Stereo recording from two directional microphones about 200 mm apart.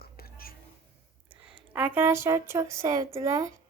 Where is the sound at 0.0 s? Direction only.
50° left (ahead or behind).